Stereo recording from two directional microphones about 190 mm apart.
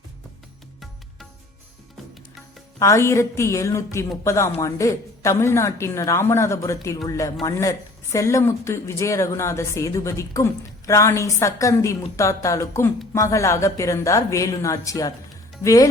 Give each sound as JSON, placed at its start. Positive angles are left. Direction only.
{"t": 2.7, "sound": "speech", "side_deg": 15}